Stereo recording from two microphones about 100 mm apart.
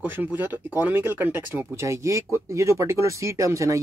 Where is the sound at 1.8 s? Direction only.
30° right (ahead or behind).